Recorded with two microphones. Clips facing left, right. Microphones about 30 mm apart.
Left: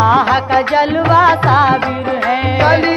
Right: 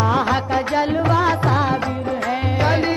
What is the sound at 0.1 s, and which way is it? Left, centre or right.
Music, left.